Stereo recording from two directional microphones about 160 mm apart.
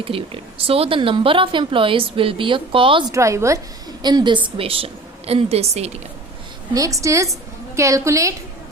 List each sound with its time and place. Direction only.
0.0 s speech: 35° right (ahead or behind)
3.1 s a woman's voice: 20° right (ahead or behind); by 6.0 s 40° right (ahead or behind)
6.7 s a woman's voice: 20° right (ahead or behind)